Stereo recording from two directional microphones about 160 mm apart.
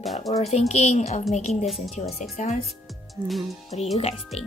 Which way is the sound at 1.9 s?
45° left (ahead or behind).